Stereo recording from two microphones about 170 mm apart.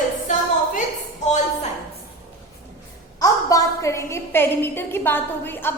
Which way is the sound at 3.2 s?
20° left (ahead or behind).